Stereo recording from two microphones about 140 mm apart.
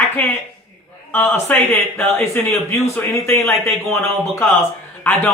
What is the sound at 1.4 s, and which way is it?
A man's voice, 15° left (ahead or behind).